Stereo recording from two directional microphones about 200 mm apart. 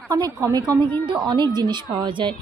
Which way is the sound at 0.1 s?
15° right (ahead or behind).